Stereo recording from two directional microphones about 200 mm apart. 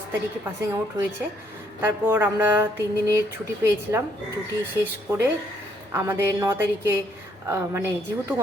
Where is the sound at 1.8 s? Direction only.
10° right (ahead or behind).